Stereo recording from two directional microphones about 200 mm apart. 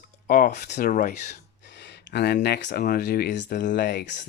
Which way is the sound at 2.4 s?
55° left (ahead or behind).